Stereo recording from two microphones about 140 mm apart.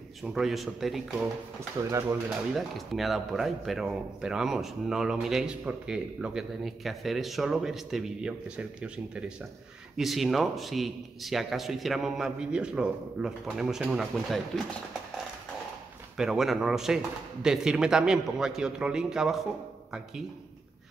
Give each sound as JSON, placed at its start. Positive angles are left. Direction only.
{"t": 0.2, "sound": "speech", "side_deg": 0}
{"t": 1.9, "sound": "speech", "side_deg": -20}
{"t": 2.5, "sound": "speech", "side_deg": 0}
{"t": 16.2, "sound": "speech", "side_deg": 0}